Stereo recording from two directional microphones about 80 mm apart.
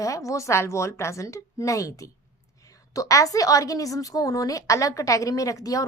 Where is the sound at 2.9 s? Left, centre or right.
Left.